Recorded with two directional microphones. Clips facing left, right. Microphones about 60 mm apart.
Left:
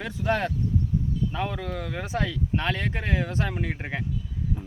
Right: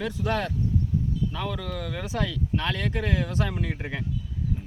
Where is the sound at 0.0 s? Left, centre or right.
Left.